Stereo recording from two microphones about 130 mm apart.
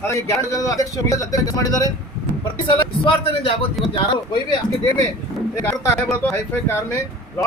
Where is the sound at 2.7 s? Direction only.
45° left (ahead or behind).